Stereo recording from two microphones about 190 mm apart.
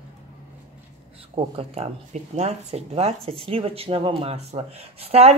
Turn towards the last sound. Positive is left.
turn(degrees=-30)  # may be behind; listen again after turning